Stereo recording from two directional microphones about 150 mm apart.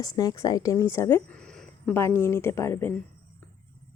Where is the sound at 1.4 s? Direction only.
5° left (ahead or behind).